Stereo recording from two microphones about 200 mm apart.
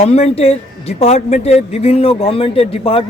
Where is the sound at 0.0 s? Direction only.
30° left (ahead or behind).